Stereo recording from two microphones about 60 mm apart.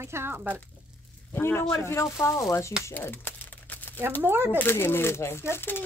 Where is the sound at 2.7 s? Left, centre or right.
Centre.